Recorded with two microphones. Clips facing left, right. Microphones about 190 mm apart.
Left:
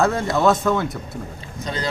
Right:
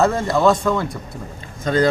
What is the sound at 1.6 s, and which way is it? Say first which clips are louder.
Speech: right 10 dB; 50° right (ahead or behind).